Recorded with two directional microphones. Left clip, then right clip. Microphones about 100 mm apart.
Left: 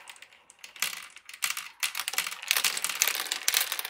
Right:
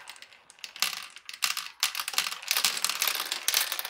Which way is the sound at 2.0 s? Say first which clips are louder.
Right 1 dB; 5° right (ahead or behind).